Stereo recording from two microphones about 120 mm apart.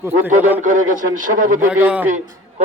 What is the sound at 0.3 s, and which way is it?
Speech, 90° right.